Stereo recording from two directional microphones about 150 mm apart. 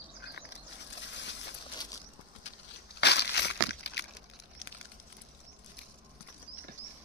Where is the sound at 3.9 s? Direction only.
90° left.